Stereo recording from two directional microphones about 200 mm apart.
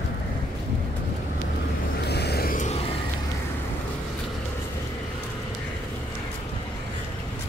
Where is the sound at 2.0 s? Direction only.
55° left (ahead or behind); by 2.8 s 40° left (ahead or behind).